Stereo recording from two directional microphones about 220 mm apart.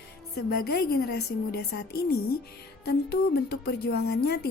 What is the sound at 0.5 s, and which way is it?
A woman's voice, 45° left (ahead or behind).